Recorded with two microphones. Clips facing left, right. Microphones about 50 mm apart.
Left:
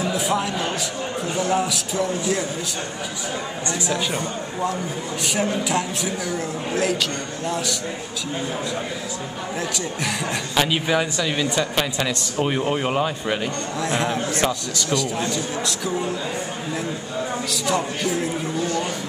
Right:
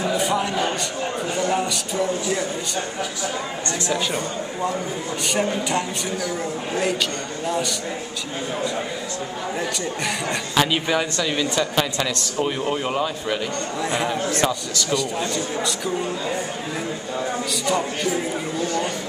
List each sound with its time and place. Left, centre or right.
0.0 s speech: centre
3.9 s speech: centre
10.5 s speech: centre
11.7 s a man's voice: centre
13.7 s speech: centre
17.6 s speech: centre